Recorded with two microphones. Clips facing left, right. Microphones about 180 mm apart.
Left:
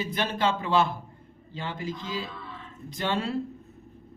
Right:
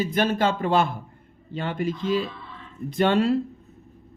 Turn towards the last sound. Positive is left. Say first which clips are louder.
# right 9 dB
turn(degrees=-60)  # may be behind; listen again after turning